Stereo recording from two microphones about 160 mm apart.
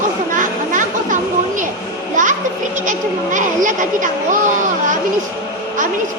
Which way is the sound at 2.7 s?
50° right (ahead or behind).